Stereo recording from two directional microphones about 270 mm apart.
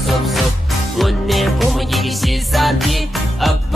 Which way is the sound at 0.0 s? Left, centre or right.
Centre.